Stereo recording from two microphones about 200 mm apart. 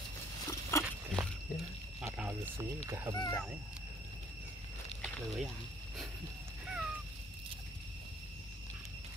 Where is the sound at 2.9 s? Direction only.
15° right (ahead or behind).